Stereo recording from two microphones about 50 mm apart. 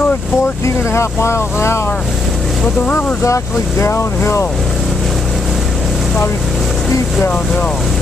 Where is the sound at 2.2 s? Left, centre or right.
Centre.